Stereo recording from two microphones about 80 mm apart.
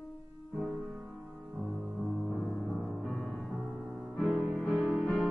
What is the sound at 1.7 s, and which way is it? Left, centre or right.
Music, centre.